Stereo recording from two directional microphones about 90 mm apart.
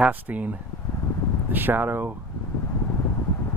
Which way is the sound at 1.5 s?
20° right (ahead or behind).